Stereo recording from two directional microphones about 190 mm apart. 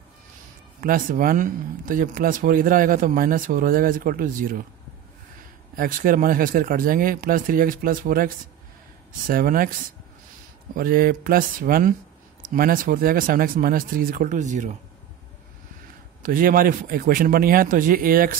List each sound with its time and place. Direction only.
0.7 s speech: 45° right (ahead or behind)
5.8 s speech: 45° right (ahead or behind)
9.3 s speech: 50° right (ahead or behind)
16.2 s speech: 45° right (ahead or behind)